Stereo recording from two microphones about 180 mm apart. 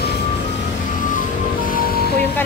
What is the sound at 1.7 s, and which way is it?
Music, 55° left (ahead or behind).